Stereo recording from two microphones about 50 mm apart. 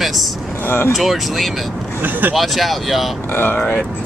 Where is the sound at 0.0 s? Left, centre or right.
Centre.